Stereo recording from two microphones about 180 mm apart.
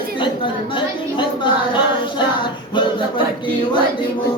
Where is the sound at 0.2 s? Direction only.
25° left (ahead or behind).